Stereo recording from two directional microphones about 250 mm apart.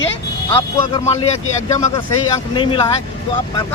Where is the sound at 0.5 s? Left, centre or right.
Centre.